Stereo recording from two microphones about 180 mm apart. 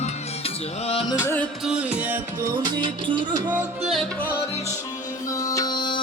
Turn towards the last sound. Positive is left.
turn(degrees=25)  # may be behind; listen again after turning